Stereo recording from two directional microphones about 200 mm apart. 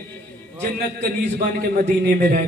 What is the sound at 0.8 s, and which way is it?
A man's voice, 45° right (ahead or behind).